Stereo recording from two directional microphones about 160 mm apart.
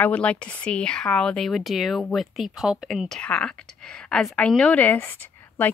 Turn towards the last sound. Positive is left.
turn(degrees=10)  # may be behind; listen again after turning